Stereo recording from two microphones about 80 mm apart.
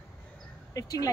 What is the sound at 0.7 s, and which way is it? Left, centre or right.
Speech, left.